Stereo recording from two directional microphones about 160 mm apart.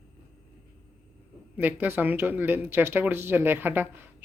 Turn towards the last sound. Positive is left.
turn(degrees=-15)  # may be behind; listen again after turning